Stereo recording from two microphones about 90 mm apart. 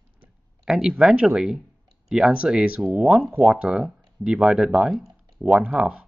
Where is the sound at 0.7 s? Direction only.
10° right (ahead or behind).